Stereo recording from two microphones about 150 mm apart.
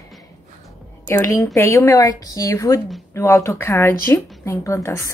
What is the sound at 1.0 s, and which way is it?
A woman's voice, 15° left (ahead or behind).